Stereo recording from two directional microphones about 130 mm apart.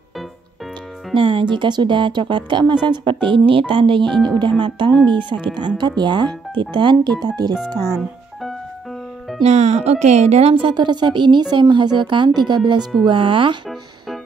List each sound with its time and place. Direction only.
1.1 s a woman's voice: 40° right (ahead or behind)
9.4 s speech: 60° right (ahead or behind)
10.5 s a woman's voice: 40° right (ahead or behind)